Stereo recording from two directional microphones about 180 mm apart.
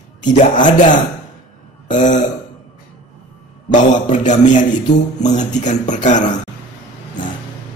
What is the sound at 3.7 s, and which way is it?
Speech, 45° left (ahead or behind).